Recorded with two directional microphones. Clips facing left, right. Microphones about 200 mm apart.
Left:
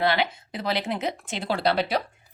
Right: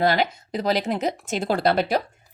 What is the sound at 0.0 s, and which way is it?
A woman's voice, 40° right (ahead or behind).